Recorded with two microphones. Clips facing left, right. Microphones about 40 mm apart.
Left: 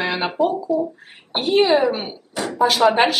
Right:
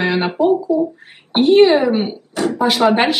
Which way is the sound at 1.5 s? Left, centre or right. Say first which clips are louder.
Right 4 dB; right.